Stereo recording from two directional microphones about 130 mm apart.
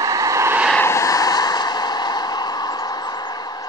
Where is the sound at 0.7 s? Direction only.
20° left (ahead or behind).